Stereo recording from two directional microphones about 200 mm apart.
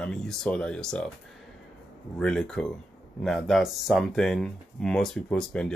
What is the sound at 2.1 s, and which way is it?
Speech, 5° left (ahead or behind).